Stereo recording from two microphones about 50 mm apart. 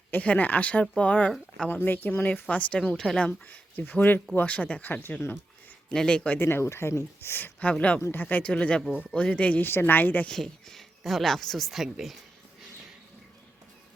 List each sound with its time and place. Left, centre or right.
0.2 s speech: left
1.7 s speech: left
2.9 s speech: centre
3.2 s speech: left
3.8 s speech: left
5.9 s speech: centre
6.4 s speech: left
7.6 s speech: left
9.6 s speech: left
10.2 s speech: centre